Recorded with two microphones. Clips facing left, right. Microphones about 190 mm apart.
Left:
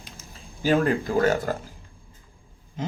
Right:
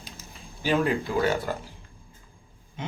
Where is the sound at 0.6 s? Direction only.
45° left (ahead or behind).